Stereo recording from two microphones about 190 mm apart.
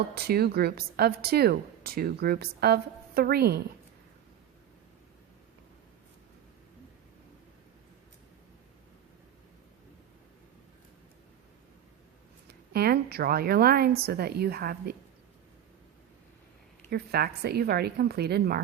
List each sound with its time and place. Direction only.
0.1 s a woman's voice: 55° right (ahead or behind)
12.5 s a woman's voice: 55° right (ahead or behind)
16.9 s a woman's voice: 55° right (ahead or behind)